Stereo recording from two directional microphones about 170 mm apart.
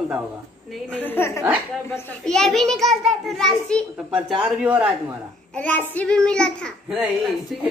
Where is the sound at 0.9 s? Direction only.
10° left (ahead or behind).